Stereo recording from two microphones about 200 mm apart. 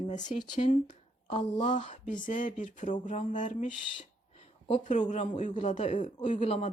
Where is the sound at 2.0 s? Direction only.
40° left (ahead or behind).